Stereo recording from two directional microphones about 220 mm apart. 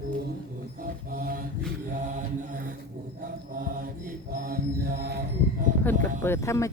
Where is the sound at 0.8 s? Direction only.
40° right (ahead or behind).